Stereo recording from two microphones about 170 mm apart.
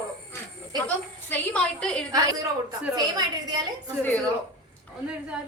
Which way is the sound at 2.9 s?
25° right (ahead or behind).